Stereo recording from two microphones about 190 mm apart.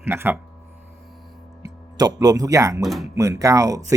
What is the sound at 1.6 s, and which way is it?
Speech, 20° right (ahead or behind).